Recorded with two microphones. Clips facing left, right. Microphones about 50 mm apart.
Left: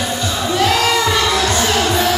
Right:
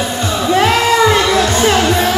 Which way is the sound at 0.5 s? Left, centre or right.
Right.